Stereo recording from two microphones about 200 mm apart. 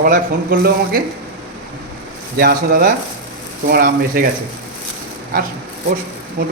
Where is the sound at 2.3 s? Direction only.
45° right (ahead or behind).